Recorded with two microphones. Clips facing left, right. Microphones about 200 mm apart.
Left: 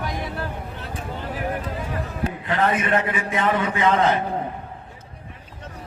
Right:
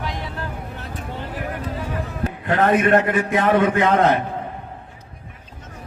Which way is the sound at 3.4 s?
45° right (ahead or behind).